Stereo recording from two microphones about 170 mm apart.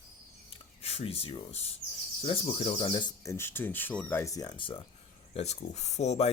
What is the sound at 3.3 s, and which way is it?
Speech, 15° left (ahead or behind).